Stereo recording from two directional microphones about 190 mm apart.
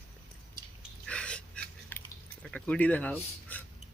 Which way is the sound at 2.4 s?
5° left (ahead or behind).